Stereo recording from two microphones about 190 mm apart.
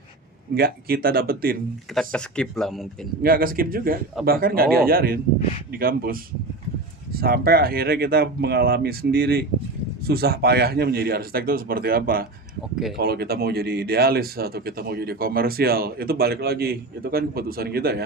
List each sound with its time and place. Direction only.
0.5 s speech: 50° right (ahead or behind)
2.0 s speech: 5° left (ahead or behind)
3.2 s speech: 50° right (ahead or behind)